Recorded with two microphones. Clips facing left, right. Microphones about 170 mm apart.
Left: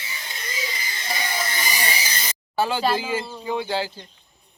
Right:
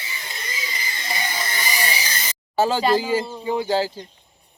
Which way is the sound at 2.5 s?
40° right (ahead or behind).